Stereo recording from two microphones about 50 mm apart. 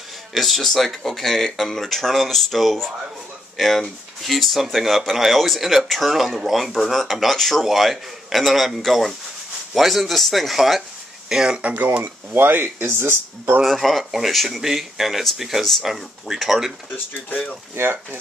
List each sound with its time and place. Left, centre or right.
0.3 s speech: centre
11.6 s speech: right
12.0 s speech: right
13.7 s speech: centre
16.9 s speech: left
17.7 s speech: right